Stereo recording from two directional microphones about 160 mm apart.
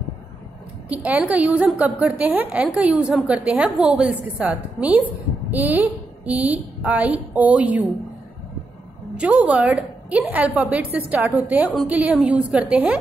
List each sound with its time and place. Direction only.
0.8 s a woman's voice: 10° right (ahead or behind)
9.1 s a woman's voice: 10° right (ahead or behind)